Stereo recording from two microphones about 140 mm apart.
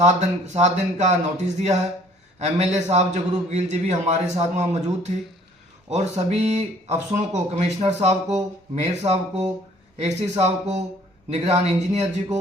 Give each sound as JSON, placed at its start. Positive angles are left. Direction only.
{"t": 0.0, "sound": "speech", "side_deg": -55}